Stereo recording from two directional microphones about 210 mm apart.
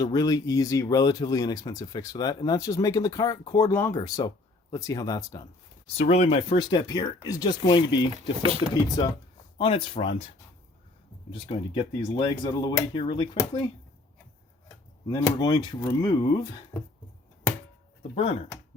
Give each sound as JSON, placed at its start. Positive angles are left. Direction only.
{"t": 0.0, "sound": "speech", "side_deg": 20}
{"t": 6.0, "sound": "speech", "side_deg": 30}
{"t": 8.1, "sound": "speech", "side_deg": -25}
{"t": 8.7, "sound": "speech", "side_deg": 20}
{"t": 11.3, "sound": "speech", "side_deg": 20}
{"t": 15.1, "sound": "speech", "side_deg": 20}
{"t": 16.7, "sound": "speech", "side_deg": 10}
{"t": 18.1, "sound": "speech", "side_deg": 30}